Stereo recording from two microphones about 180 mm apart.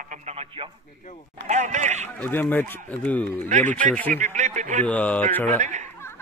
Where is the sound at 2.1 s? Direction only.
10° left (ahead or behind).